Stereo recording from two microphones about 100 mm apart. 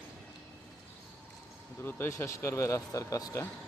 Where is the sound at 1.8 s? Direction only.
20° left (ahead or behind).